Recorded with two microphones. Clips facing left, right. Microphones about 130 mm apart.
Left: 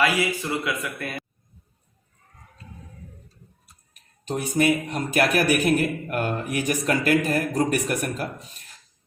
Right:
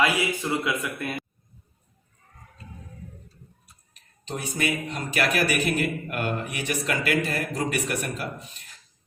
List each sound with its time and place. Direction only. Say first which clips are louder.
0.6 s a man's voice: right 1 dB; 20° right (ahead or behind)
4.3 s a man's voice: left 6 dB; 55° left (ahead or behind)